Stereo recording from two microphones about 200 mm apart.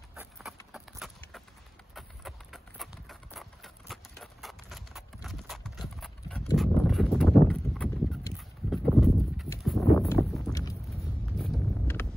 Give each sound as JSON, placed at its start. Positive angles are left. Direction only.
{"t": 0.1, "sound": "clip-clop", "side_deg": 0}
{"t": 9.9, "sound": "a sound", "side_deg": 10}
{"t": 10.5, "sound": "vehicle", "side_deg": 15}
{"t": 10.9, "sound": "vehicle", "side_deg": 0}